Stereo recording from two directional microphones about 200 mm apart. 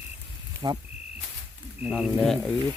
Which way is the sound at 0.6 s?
20° right (ahead or behind).